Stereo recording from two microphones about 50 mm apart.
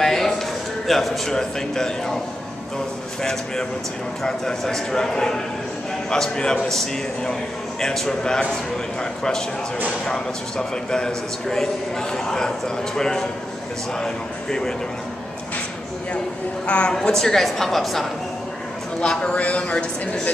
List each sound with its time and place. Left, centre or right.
0.0 s a sound: centre
0.8 s a man's voice: centre
3.2 s a man's voice: centre
10.0 s a man's voice: centre
16.6 s a man's voice: left
16.9 s a woman's voice: centre
18.9 s a man's voice: left